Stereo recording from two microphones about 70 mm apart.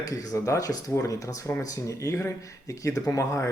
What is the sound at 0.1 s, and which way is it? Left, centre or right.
Speech, left.